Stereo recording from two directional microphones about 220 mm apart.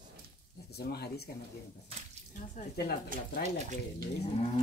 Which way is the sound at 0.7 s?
45° left (ahead or behind).